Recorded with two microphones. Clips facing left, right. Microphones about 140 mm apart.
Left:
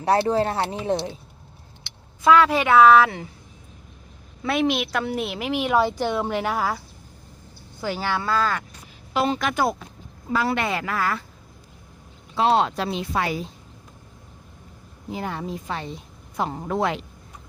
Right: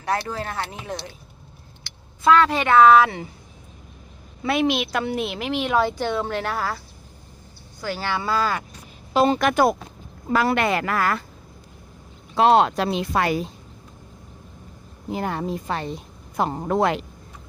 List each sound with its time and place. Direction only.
0.0 s speech: 30° left (ahead or behind)
2.2 s a woman's voice: 5° left (ahead or behind)
4.4 s speech: centre (ahead or behind); by 8.0 s 20° left (ahead or behind)
8.0 s a woman's voice: centre (ahead or behind)
9.1 s speech: 45° right (ahead or behind); by 11.2 s 60° right (ahead or behind)
12.4 s speech: 60° right (ahead or behind)
15.1 s a woman's voice: 50° right (ahead or behind)
16.8 s speech: 60° right (ahead or behind)